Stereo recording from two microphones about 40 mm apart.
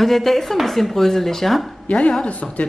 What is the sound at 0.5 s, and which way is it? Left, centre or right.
Speech, centre.